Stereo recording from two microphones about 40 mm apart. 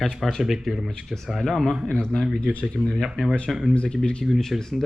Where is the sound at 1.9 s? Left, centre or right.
Centre.